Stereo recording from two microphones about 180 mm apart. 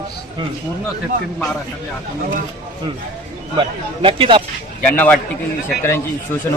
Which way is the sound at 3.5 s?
30° right (ahead or behind).